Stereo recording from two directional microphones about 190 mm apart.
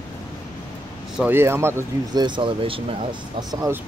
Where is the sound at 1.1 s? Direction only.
10° right (ahead or behind).